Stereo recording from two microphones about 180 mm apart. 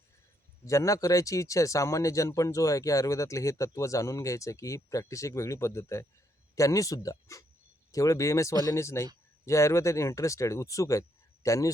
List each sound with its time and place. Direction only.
0.6 s speech: 15° left (ahead or behind)